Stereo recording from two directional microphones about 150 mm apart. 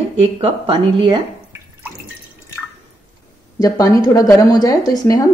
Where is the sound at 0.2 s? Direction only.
35° right (ahead or behind).